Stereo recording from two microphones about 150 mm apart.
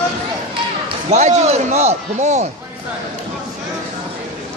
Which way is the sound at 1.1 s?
50° right (ahead or behind).